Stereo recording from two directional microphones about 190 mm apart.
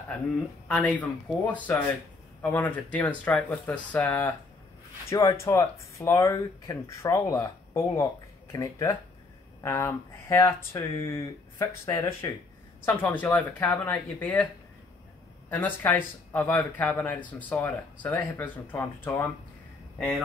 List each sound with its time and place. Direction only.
0.7 s speech: 5° left (ahead or behind)
15.5 s speech: 10° left (ahead or behind)